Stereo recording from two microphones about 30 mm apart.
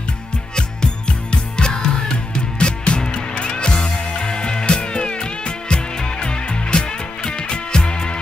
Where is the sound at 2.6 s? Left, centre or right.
Left.